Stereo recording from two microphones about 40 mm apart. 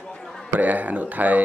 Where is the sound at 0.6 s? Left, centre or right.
Right.